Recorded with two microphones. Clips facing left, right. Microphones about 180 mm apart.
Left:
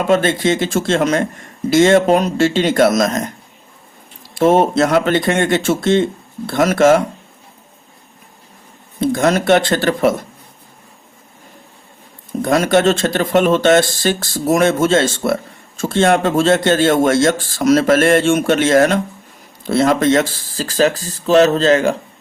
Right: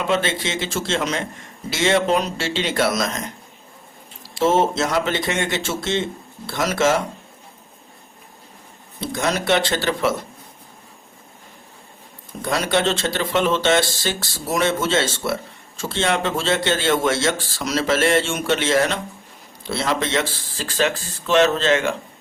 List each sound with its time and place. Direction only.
0.1 s speech: 50° left (ahead or behind)
4.4 s speech: 55° left (ahead or behind)
9.0 s speech: 50° left (ahead or behind)
12.4 s speech: 50° left (ahead or behind)